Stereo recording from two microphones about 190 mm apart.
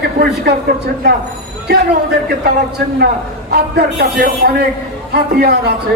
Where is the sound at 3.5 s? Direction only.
55° right (ahead or behind).